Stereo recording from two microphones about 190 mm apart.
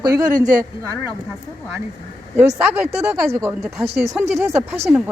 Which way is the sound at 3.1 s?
15° right (ahead or behind).